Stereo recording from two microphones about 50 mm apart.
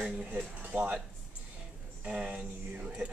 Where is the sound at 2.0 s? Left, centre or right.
Centre.